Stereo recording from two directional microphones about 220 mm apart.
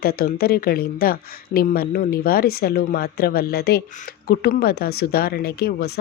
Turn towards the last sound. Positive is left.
turn(degrees=45)  # may be behind; listen again after turning